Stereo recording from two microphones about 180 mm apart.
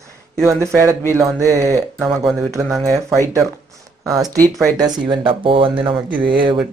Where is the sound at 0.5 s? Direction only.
15° right (ahead or behind).